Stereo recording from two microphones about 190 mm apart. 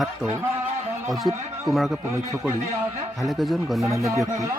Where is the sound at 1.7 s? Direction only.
Centre (ahead or behind).